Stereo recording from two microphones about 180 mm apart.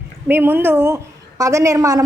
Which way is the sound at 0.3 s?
10° right (ahead or behind).